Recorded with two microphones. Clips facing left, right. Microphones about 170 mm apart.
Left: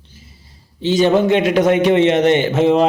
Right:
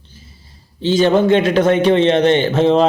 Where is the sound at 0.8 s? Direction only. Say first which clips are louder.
Right 1 dB; 15° left (ahead or behind).